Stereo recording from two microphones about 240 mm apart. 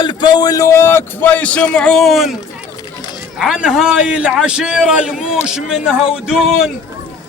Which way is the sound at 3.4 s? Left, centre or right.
Centre.